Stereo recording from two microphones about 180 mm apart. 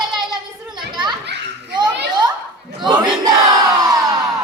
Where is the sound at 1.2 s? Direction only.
70° right (ahead or behind).